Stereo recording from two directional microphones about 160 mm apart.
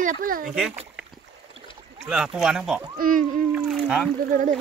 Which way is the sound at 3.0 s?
60° right (ahead or behind).